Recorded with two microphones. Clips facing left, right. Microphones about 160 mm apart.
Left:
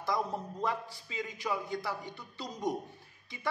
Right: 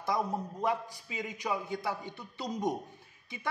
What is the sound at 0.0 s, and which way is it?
A man's voice, 20° right (ahead or behind).